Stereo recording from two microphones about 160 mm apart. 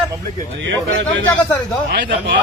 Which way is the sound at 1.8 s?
90° right.